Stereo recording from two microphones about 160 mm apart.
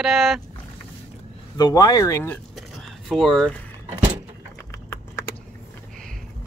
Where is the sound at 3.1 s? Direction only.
Centre (ahead or behind).